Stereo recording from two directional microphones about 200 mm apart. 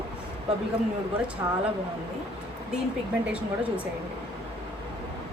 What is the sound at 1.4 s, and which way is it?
Speech, 20° right (ahead or behind).